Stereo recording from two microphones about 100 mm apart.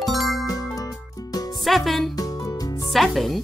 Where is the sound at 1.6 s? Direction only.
Centre (ahead or behind).